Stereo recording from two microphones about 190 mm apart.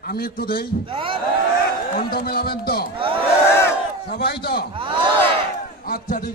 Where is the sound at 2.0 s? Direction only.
50° left (ahead or behind).